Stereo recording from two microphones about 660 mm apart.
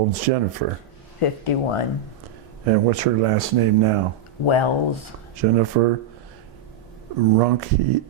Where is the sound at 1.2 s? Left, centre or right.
Left.